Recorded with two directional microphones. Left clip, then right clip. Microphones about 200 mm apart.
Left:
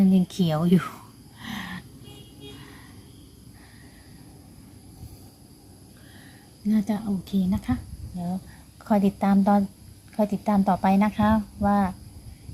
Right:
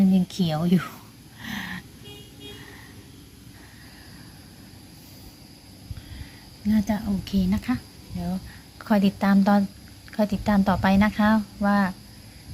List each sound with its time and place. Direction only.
0.0 s speech: 30° left (ahead or behind)
1.4 s a sound: 15° left (ahead or behind)
6.7 s speech: 20° left (ahead or behind)
8.8 s speech: 10° left (ahead or behind)